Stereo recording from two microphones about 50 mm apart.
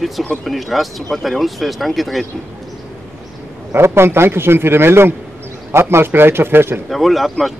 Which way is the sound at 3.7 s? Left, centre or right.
Right.